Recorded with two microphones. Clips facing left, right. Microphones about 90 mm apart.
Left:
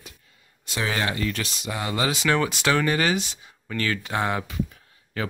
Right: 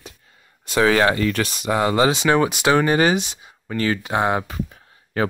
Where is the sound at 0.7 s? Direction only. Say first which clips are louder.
Right 10 dB; 65° right (ahead or behind).